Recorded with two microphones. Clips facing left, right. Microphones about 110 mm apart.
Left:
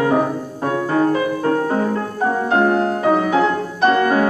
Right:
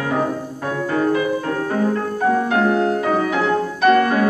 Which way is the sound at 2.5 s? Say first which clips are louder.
Left 1 dB; 35° left (ahead or behind).